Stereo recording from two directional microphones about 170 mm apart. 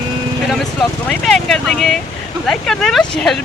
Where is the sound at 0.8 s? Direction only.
5° left (ahead or behind).